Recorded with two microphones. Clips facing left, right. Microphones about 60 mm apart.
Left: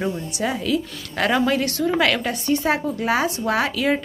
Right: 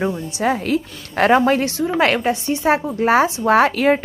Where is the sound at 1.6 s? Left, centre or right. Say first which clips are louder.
Right 1 dB; centre.